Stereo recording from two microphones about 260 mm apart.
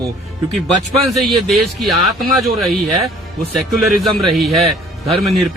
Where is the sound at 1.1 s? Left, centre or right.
Centre.